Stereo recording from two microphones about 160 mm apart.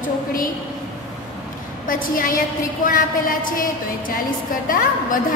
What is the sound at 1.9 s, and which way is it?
A woman's voice, 60° left (ahead or behind).